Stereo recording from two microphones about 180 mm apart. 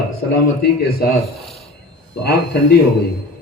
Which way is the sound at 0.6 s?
60° left (ahead or behind).